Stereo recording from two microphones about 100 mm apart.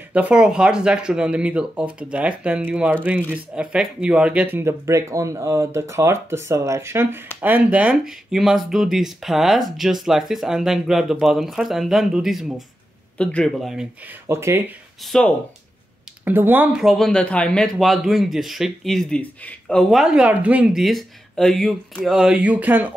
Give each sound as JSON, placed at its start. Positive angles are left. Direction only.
{"t": 0.1, "sound": "speech", "side_deg": -10}
{"t": 13.2, "sound": "a man's voice", "side_deg": 10}
{"t": 13.6, "sound": "speech", "side_deg": -5}
{"t": 14.2, "sound": "speech", "side_deg": -25}
{"t": 15.0, "sound": "speech", "side_deg": 5}
{"t": 16.3, "sound": "speech", "side_deg": -20}
{"t": 16.7, "sound": "a man's voice", "side_deg": 0}
{"t": 17.7, "sound": "speech", "side_deg": 0}